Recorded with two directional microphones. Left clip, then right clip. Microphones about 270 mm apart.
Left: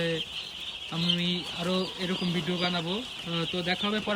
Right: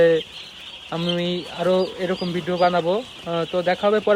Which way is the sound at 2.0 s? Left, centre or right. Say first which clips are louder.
Right 7 dB; centre.